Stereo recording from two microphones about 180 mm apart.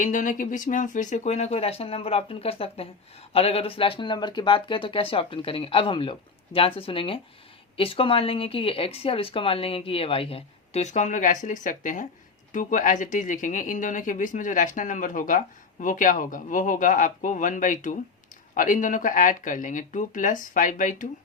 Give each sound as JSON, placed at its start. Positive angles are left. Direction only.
{"t": 0.0, "sound": "speech", "side_deg": 45}